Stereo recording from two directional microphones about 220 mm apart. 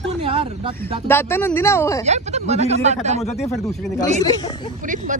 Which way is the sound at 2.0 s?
30° right (ahead or behind).